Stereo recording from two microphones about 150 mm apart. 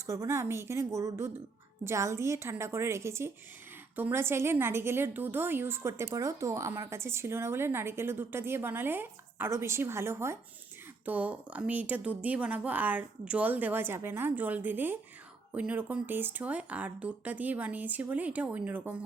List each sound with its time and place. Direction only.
0.0 s a woman's voice: 20° right (ahead or behind)